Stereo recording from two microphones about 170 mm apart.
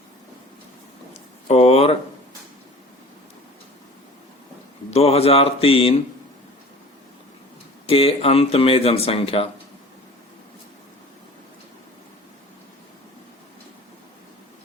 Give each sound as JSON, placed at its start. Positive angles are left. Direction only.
{"t": 1.5, "sound": "speech", "side_deg": 40}
{"t": 4.9, "sound": "speech", "side_deg": 35}
{"t": 7.9, "sound": "speech", "side_deg": 35}